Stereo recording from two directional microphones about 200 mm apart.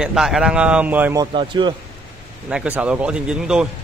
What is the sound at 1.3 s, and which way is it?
Speech, 25° right (ahead or behind).